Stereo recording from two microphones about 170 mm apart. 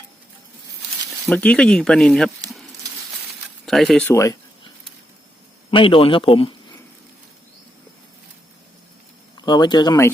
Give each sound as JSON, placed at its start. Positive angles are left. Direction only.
{"t": 1.3, "sound": "speech", "side_deg": 5}
{"t": 3.7, "sound": "speech", "side_deg": 0}
{"t": 4.1, "sound": "speech", "side_deg": 20}
{"t": 5.7, "sound": "a man's voice", "side_deg": 30}
{"t": 9.4, "sound": "speech", "side_deg": 25}